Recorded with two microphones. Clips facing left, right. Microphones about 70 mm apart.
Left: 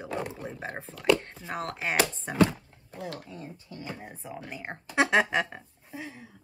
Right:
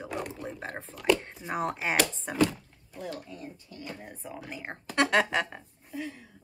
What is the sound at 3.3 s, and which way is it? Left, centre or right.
Speech, left.